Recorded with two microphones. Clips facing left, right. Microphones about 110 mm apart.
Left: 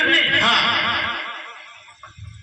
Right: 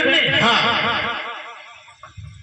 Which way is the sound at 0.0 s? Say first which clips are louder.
Right 2 dB; 55° right (ahead or behind).